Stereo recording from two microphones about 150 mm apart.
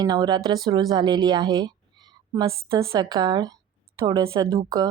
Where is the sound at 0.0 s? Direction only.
25° right (ahead or behind).